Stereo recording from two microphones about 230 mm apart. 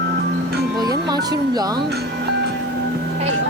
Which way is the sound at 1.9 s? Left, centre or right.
Right.